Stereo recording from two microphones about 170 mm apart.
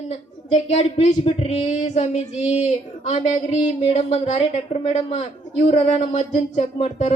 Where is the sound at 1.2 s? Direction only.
40° left (ahead or behind).